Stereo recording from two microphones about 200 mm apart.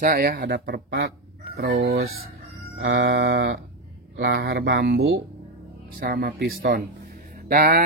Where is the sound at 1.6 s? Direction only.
70° right (ahead or behind).